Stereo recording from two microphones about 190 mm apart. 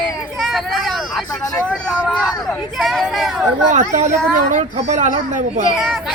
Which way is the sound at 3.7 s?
40° right (ahead or behind).